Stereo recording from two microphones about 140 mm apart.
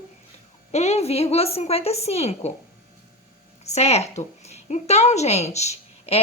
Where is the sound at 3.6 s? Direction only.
50° left (ahead or behind).